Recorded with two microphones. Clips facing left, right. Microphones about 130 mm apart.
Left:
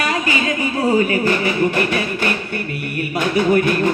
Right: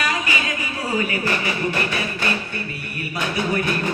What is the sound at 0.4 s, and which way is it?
Music, 30° left (ahead or behind).